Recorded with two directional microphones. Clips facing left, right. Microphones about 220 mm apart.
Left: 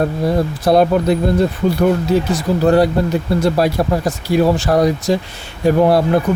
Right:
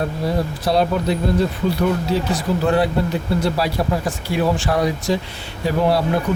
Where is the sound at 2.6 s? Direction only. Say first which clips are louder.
Left 6 dB; 40° left (ahead or behind).